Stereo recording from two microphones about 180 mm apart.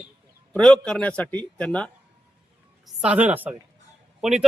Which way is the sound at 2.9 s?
5° right (ahead or behind).